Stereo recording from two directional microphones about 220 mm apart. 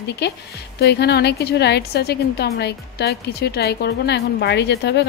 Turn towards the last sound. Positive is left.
turn(degrees=50)  # may be behind; listen again after turning